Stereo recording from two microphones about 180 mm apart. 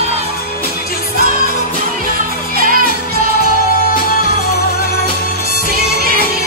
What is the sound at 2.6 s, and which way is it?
Music, 50° right (ahead or behind).